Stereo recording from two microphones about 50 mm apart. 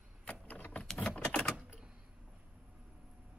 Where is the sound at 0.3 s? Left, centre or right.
Left.